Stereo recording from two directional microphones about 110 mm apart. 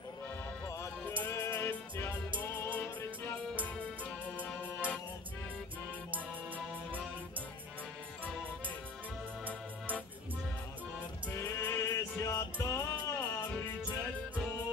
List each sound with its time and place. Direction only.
1.0 s music: 15° left (ahead or behind)
11.2 s music: 20° left (ahead or behind)